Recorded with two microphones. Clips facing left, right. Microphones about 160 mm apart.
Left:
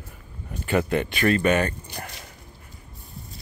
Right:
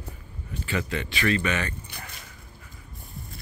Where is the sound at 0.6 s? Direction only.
50° left (ahead or behind).